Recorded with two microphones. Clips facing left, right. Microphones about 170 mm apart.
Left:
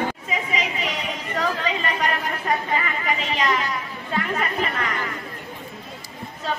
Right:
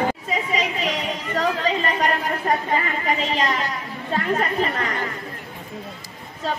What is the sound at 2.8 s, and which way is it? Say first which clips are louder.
Speech: right 2 dB; 35° right (ahead or behind).